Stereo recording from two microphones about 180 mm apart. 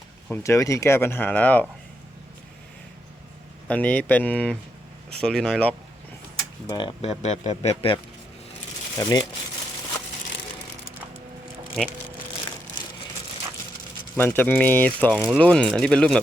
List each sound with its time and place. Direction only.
0.3 s speech: 15° left (ahead or behind)
3.7 s speech: 10° left (ahead or behind)
6.7 s speech: 25° left (ahead or behind)
9.0 s speech: 20° left (ahead or behind)
14.2 s speech: 10° left (ahead or behind)